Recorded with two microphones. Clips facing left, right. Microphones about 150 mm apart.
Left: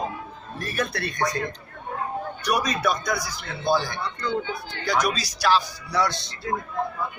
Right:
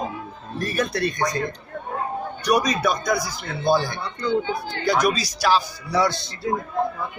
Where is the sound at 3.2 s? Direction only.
50° right (ahead or behind).